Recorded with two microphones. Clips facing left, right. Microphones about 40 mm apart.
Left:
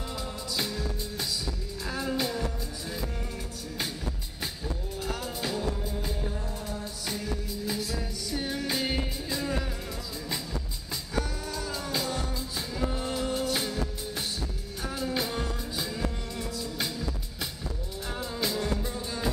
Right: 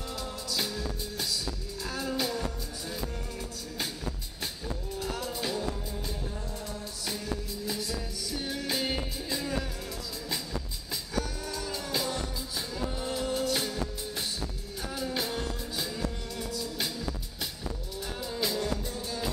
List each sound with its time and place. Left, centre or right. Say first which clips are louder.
0.1 s music: even; centre
4.9 s music: right 1 dB; centre
7.1 s music: left 1 dB; centre
11.4 s music: left 1 dB; centre